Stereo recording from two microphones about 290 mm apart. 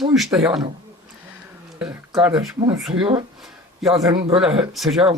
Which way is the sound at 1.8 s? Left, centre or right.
Centre.